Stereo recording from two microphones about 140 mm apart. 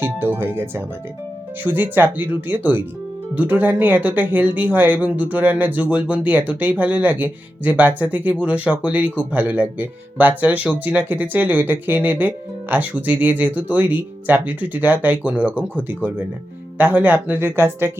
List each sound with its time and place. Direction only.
0.0 s speech: 15° right (ahead or behind)